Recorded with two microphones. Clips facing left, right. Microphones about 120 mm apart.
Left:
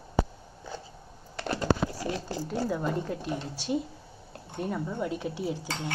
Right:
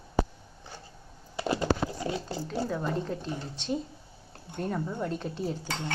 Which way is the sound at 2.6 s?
5° left (ahead or behind).